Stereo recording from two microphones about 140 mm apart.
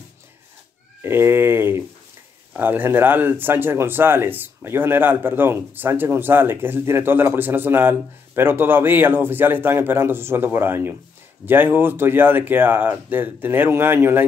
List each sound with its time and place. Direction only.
1.0 s speech: 15° right (ahead or behind)